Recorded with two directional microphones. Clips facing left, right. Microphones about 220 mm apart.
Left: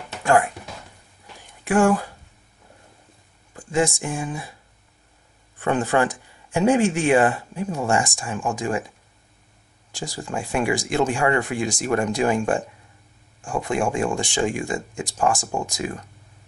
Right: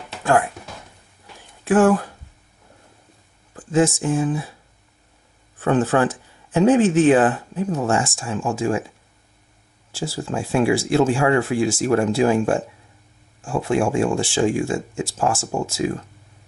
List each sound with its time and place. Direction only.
1.6 s speech: 15° left (ahead or behind)
3.5 s speech: 15° left (ahead or behind)
5.6 s speech: 15° left (ahead or behind)
9.9 s speech: 15° left (ahead or behind)